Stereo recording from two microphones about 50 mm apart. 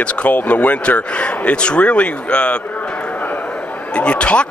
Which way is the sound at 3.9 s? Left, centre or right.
Left.